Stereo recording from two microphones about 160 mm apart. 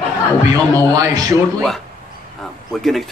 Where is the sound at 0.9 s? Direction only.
20° right (ahead or behind).